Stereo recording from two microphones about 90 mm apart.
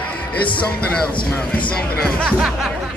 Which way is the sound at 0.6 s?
15° left (ahead or behind).